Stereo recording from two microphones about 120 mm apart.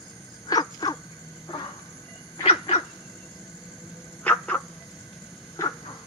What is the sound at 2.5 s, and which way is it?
Dog, 50° left (ahead or behind).